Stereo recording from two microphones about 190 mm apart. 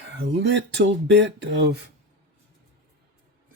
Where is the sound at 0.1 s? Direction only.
70° right (ahead or behind).